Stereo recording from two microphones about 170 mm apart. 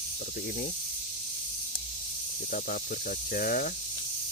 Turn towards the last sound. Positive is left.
turn(degrees=55)  # may be behind; listen again after turning